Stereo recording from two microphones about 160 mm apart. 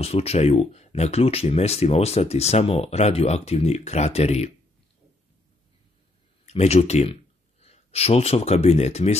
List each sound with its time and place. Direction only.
0.0 s speech: 40° left (ahead or behind)
6.4 s speech: 40° left (ahead or behind)